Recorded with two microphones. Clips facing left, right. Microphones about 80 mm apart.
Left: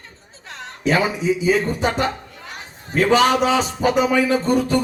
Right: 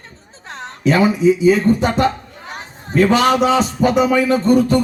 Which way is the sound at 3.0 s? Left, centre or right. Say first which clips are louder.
Right 2 dB; centre.